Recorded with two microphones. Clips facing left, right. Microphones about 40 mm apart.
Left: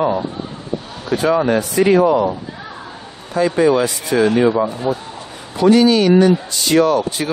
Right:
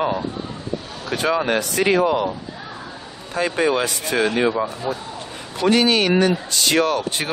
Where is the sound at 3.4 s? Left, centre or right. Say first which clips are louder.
Left 5 dB; right.